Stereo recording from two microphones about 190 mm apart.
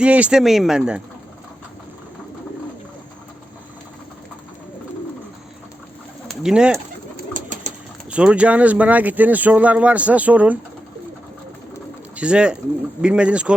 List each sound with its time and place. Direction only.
0.0 s speech: 5° right (ahead or behind)
6.2 s bird: 5° right (ahead or behind)
7.3 s pigeon: 40° right (ahead or behind)
8.1 s speech: 5° right (ahead or behind)
12.1 s speech: 5° right (ahead or behind)